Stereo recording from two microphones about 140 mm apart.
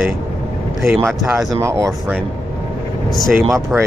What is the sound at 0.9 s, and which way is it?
Speech, 20° right (ahead or behind).